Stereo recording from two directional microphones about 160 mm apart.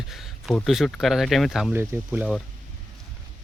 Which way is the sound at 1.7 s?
15° right (ahead or behind).